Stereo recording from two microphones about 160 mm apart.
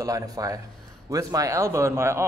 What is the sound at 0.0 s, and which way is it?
A man's voice, 20° right (ahead or behind).